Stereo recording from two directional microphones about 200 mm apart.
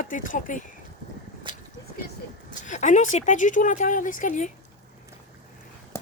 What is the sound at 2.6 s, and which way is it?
Speech, 40° left (ahead or behind).